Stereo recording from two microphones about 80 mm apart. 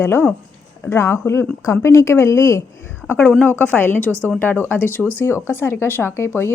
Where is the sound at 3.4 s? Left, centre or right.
Left.